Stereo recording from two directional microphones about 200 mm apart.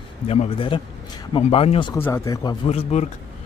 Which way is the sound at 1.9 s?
15° left (ahead or behind).